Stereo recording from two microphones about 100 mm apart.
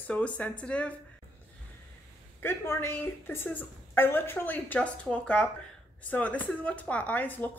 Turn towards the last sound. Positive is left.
turn(degrees=15)  # may be behind; listen again after turning